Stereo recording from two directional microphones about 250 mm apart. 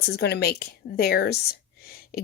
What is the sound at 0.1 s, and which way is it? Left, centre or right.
Speech, left.